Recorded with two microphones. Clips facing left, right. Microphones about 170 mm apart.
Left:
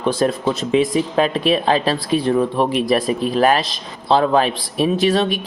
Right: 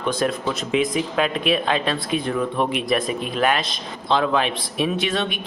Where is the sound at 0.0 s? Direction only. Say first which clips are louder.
Left 5 dB; 30° left (ahead or behind).